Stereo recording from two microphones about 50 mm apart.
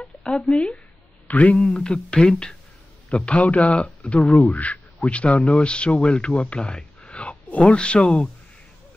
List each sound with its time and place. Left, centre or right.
0.3 s a man's voice: left
1.6 s a man's voice: centre